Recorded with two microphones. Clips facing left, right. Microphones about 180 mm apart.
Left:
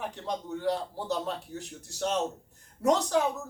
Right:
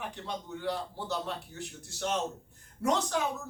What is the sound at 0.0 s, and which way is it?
Speech, 40° left (ahead or behind).